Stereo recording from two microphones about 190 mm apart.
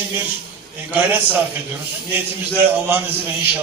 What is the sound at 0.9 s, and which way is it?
Speech, 10° right (ahead or behind).